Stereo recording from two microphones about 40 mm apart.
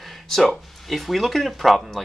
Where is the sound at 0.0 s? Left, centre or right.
Centre.